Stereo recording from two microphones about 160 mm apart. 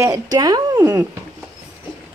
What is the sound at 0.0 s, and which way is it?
Speech, 20° right (ahead or behind).